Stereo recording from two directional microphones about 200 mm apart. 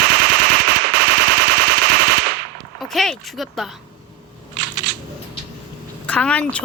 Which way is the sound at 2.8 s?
Centre (ahead or behind).